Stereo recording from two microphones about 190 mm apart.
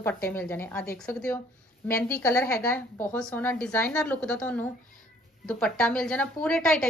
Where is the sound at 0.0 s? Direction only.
10° left (ahead or behind).